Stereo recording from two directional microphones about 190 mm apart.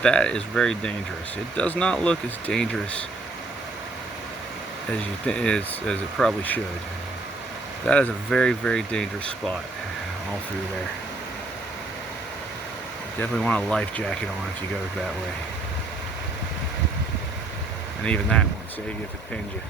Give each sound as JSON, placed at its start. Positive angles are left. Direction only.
{"t": 0.0, "sound": "speech", "side_deg": 5}
{"t": 5.2, "sound": "speech", "side_deg": 5}
{"t": 7.9, "sound": "speech", "side_deg": 5}
{"t": 13.1, "sound": "speech", "side_deg": 5}
{"t": 18.0, "sound": "speech", "side_deg": 5}